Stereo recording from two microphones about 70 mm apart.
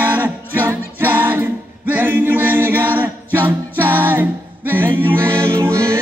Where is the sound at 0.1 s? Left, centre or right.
Right.